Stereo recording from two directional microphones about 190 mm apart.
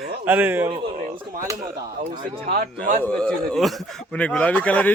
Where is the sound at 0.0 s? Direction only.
10° right (ahead or behind).